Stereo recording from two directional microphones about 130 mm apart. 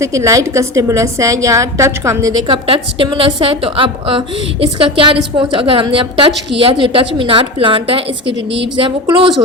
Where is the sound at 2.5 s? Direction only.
40° right (ahead or behind).